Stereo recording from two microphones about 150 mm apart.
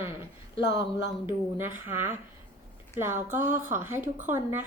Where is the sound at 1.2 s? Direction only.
15° right (ahead or behind).